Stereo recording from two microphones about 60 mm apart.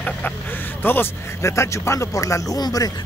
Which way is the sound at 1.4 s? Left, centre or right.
Left.